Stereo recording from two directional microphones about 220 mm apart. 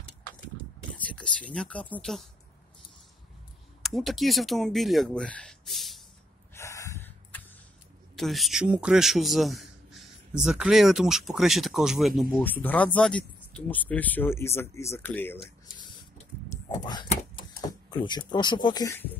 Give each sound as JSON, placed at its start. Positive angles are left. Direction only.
{"t": 0.9, "sound": "a sound", "side_deg": 5}
{"t": 1.5, "sound": "a man's voice", "side_deg": 5}
{"t": 3.8, "sound": "a man's voice", "side_deg": 0}
{"t": 6.5, "sound": "snort", "side_deg": 15}
{"t": 8.2, "sound": "a man's voice", "side_deg": 0}
{"t": 16.4, "sound": "whispering", "side_deg": 15}
{"t": 17.1, "sound": "a sound", "side_deg": 20}